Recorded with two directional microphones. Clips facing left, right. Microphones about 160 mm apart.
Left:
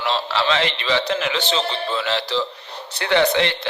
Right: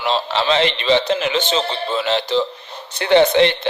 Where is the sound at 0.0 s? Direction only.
20° right (ahead or behind).